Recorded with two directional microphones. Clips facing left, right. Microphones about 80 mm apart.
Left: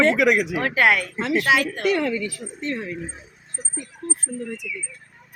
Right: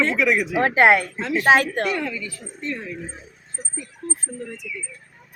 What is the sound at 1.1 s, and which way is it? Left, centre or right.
Speech, left.